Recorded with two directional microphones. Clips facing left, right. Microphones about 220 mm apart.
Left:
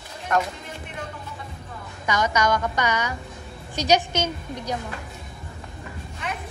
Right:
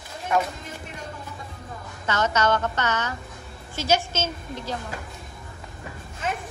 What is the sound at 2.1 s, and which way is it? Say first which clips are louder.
A woman's voice: even; 15° left (ahead or behind).